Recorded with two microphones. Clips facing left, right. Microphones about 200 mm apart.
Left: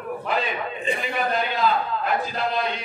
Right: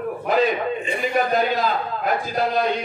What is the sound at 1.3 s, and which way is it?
A man's voice, 40° right (ahead or behind).